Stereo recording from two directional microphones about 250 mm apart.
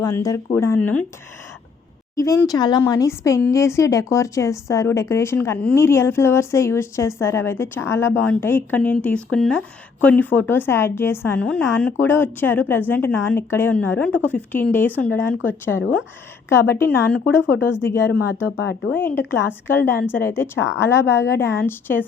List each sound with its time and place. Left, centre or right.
0.2 s speech: centre
2.1 s speech: centre
15.8 s speech: left
16.5 s speech: centre
18.1 s speech: left
18.9 s speech: centre